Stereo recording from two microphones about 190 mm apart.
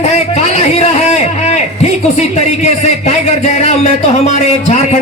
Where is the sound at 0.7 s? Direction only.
35° left (ahead or behind).